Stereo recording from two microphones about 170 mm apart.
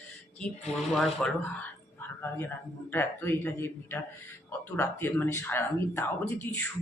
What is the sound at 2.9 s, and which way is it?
Speech, 10° left (ahead or behind).